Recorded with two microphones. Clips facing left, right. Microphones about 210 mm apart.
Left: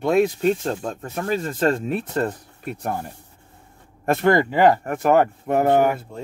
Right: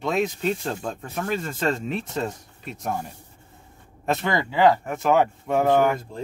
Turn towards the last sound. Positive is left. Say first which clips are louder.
# left 2 dB
turn(degrees=50)  # may be behind; listen again after turning